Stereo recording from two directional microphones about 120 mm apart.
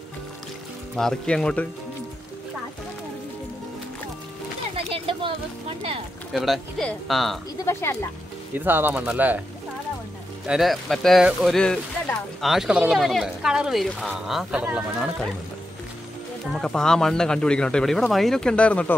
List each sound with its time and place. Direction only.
0.9 s speech: 5° left (ahead or behind)
4.7 s a sound: 50° right (ahead or behind)
6.3 s speech: centre (ahead or behind)
7.6 s speech: 20° left (ahead or behind)
8.5 s speech: 15° right (ahead or behind)
10.4 s speech: 5° right (ahead or behind)
16.5 s speech: 5° left (ahead or behind)